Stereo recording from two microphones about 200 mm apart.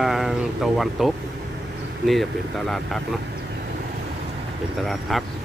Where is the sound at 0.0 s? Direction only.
Centre (ahead or behind).